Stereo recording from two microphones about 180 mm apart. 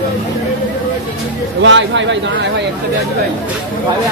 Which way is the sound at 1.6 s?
90° right.